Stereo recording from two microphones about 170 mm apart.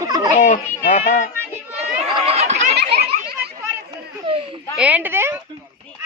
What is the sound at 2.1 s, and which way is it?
Chatter, 35° right (ahead or behind).